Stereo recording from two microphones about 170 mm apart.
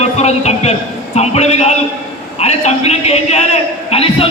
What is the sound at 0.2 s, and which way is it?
A man's voice, 40° left (ahead or behind).